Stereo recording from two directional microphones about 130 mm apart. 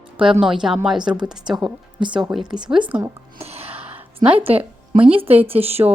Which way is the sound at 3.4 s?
50° right (ahead or behind).